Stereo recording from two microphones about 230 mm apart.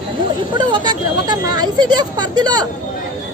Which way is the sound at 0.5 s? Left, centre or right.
Centre.